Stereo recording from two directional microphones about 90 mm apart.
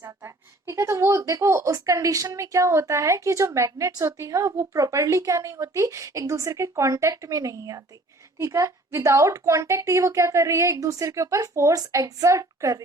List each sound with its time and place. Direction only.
0.7 s speech: 35° right (ahead or behind)